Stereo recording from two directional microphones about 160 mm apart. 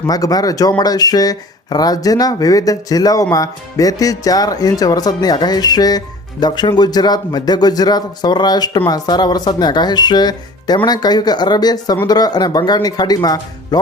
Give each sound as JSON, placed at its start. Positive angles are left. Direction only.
{"t": 0.1, "sound": "speech", "side_deg": 25}